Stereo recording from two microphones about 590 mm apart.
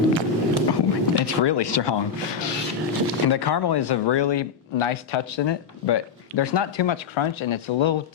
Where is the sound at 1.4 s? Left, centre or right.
Left.